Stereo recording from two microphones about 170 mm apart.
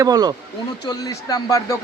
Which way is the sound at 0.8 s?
20° left (ahead or behind).